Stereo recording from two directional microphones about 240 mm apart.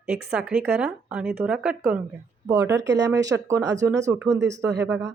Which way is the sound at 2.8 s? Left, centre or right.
Right.